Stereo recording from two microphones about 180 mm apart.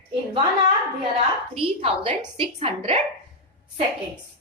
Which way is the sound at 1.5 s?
30° right (ahead or behind).